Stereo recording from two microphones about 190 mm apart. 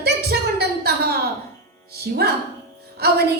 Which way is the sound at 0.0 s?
55° right (ahead or behind).